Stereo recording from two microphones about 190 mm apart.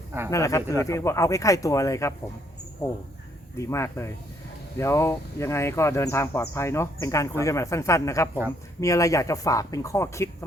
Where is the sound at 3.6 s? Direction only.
15° left (ahead or behind).